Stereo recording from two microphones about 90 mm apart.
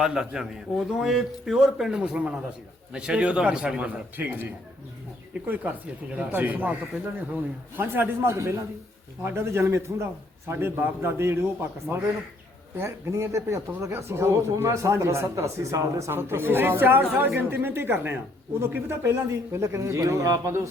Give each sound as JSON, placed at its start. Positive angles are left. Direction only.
{"t": 0.0, "sound": "a man's voice", "side_deg": -10}
{"t": 6.1, "sound": "a man's voice", "side_deg": -20}